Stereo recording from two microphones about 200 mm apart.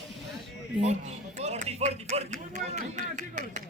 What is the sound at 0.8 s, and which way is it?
Speech, 35° right (ahead or behind).